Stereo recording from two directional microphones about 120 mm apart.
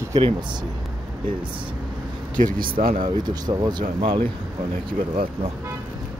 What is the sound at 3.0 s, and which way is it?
Speech, 35° right (ahead or behind).